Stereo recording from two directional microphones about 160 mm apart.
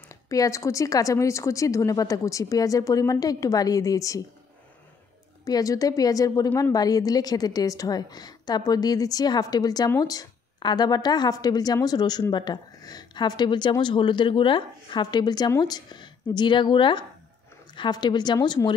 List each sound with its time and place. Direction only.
0.1 s a woman's voice: 20° left (ahead or behind)
5.4 s a woman's voice: 20° left (ahead or behind)